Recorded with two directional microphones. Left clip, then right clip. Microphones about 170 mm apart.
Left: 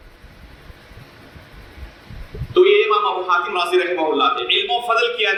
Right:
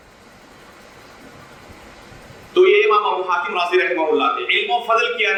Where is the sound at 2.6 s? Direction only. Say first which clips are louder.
Even; 25° left (ahead or behind).